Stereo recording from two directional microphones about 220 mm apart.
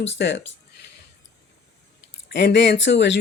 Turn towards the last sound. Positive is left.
turn(degrees=55)  # may be behind; listen again after turning